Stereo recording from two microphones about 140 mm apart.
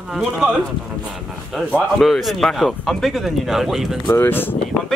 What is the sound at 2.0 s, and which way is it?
Speech, centre (ahead or behind).